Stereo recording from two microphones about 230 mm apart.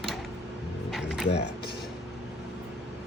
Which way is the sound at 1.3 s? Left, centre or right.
Left.